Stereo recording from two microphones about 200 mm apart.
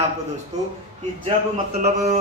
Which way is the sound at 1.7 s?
30° right (ahead or behind).